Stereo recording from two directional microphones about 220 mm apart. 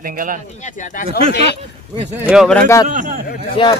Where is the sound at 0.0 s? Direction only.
40° right (ahead or behind).